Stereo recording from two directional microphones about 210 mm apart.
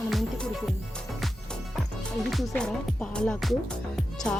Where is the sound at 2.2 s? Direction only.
Centre (ahead or behind).